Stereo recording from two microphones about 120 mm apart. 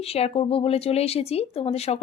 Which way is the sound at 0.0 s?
55° left (ahead or behind).